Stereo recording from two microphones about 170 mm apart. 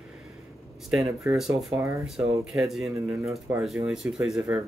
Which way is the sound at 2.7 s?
Centre (ahead or behind).